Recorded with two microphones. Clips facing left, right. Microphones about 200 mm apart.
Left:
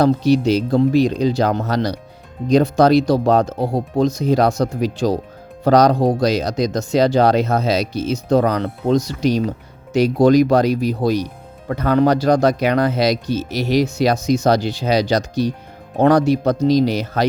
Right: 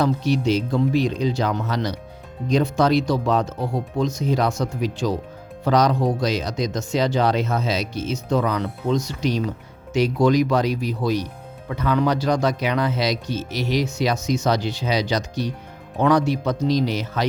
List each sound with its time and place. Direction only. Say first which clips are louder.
0.0 s speech: left 6 dB; 35° left (ahead or behind)